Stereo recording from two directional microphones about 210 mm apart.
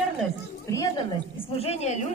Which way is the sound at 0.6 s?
15° left (ahead or behind).